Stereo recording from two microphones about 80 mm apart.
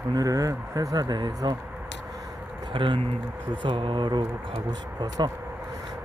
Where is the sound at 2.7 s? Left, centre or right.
Right.